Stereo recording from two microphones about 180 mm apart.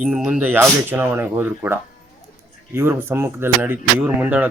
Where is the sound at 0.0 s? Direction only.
5° right (ahead or behind).